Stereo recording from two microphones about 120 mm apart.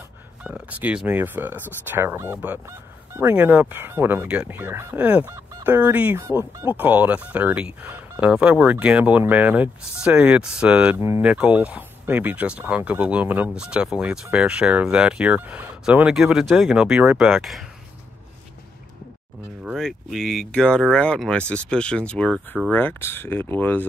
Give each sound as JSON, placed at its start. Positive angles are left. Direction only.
{"t": 0.4, "sound": "speech", "side_deg": -10}
{"t": 11.0, "sound": "speech", "side_deg": -20}
{"t": 11.2, "sound": "speech", "side_deg": -10}
{"t": 19.8, "sound": "speech", "side_deg": 0}